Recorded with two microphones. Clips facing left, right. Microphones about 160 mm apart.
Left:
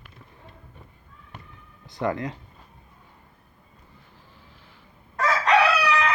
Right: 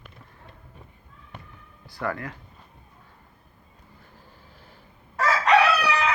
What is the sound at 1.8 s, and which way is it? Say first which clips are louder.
Speech: left 4 dB; 20° left (ahead or behind).